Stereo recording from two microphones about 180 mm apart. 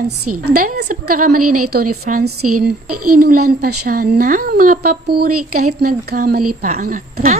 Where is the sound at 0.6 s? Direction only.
50° right (ahead or behind).